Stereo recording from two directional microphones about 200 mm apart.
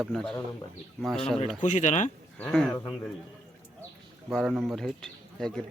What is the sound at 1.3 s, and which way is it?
Speech, 35° left (ahead or behind).